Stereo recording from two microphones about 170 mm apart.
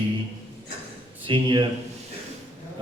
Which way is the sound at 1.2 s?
30° right (ahead or behind).